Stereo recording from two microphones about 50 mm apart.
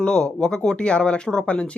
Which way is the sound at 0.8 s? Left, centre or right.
Left.